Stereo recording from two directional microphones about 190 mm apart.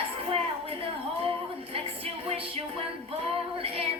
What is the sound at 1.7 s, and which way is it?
Music, 30° right (ahead or behind).